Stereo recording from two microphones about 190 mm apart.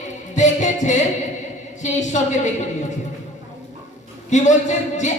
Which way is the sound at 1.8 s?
40° left (ahead or behind).